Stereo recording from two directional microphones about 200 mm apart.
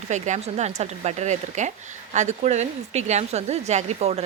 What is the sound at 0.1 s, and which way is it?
A woman's voice, 35° right (ahead or behind).